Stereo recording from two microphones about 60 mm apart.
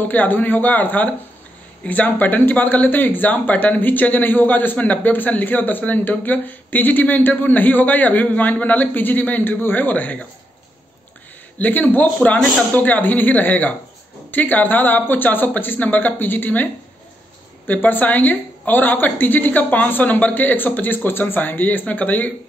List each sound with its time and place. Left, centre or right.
0.0 s speech: left
11.5 s speech: left
17.6 s speech: left